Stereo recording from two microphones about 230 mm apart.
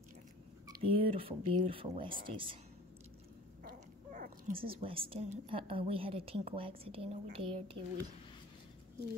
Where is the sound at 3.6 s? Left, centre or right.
Right.